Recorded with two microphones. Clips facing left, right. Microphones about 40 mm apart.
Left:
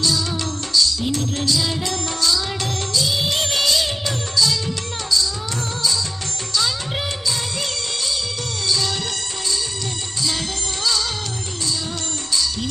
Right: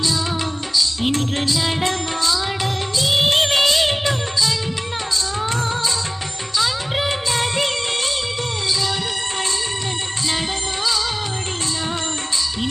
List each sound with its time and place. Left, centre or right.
1.0 s music: right
1.5 s music: right
6.6 s music: centre
7.3 s music: right